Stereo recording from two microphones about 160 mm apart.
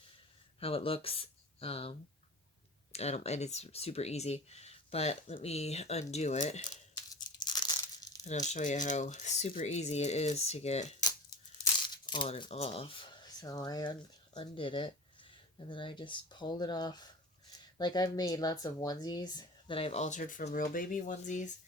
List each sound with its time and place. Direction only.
0.6 s speech: 35° left (ahead or behind)
6.7 s tearing: 25° left (ahead or behind)
8.2 s speech: 50° left (ahead or behind)
11.8 s crumpling: 30° left (ahead or behind)
12.3 s speech: 40° left (ahead or behind)
13.4 s speech: 25° left (ahead or behind); by 21.5 s 50° left (ahead or behind)